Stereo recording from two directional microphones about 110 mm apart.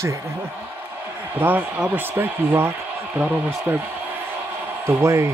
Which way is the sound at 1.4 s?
15° right (ahead or behind).